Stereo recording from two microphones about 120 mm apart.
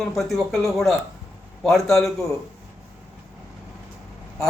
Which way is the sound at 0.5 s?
Centre (ahead or behind).